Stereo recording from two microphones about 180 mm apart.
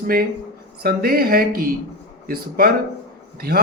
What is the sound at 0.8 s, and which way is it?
Speech, 55° right (ahead or behind).